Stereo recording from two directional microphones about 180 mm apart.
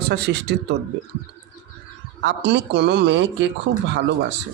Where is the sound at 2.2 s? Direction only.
70° right (ahead or behind).